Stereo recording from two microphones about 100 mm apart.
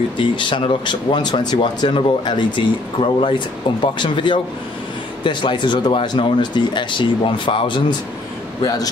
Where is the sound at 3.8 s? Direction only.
55° left (ahead or behind).